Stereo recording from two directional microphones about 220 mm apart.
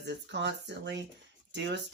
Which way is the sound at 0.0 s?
50° right (ahead or behind).